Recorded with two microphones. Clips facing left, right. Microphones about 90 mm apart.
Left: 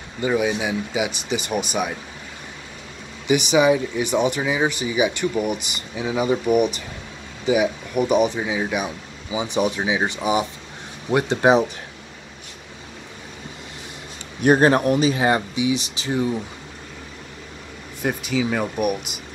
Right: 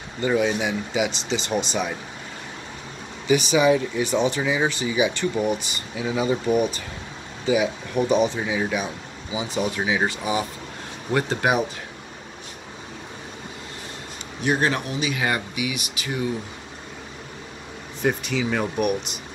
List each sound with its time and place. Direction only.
0.3 s speech: 5° left (ahead or behind)
3.3 s speech: 15° left (ahead or behind)
9.3 s speech: 20° left (ahead or behind)
14.4 s speech: 45° left (ahead or behind); by 16.3 s 25° left (ahead or behind)
18.0 s speech: 5° left (ahead or behind)